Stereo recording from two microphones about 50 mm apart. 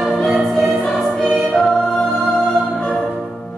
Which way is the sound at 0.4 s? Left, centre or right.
Centre.